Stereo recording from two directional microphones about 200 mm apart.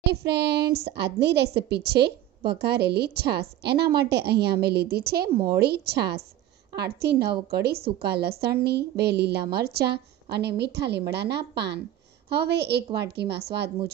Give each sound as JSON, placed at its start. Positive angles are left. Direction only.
{"t": 0.0, "sound": "a woman's voice", "side_deg": -55}